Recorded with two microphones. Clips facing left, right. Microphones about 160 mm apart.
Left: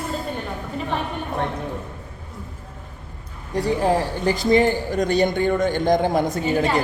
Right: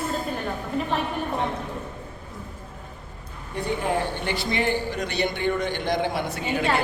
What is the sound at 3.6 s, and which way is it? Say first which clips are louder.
A man's voice: left 5 dB; 35° left (ahead or behind).